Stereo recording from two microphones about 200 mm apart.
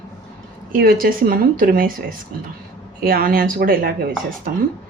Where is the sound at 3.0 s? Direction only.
45° right (ahead or behind).